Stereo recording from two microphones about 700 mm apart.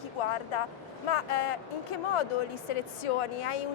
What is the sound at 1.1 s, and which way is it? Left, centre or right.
A woman's voice, left.